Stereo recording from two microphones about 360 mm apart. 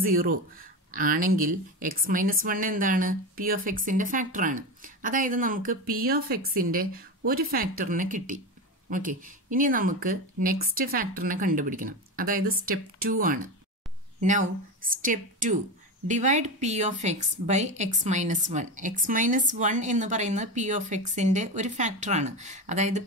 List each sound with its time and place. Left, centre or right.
0.0 s a woman's voice: right